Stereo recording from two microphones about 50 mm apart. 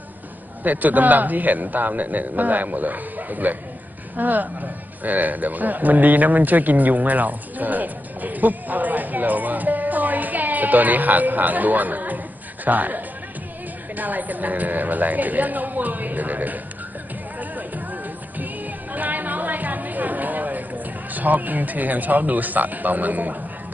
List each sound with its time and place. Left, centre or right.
0.7 s a man's voice: right
17.4 s music: right
18.9 s chatter: right